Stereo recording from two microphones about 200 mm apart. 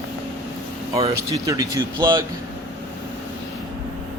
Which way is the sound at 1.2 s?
15° right (ahead or behind).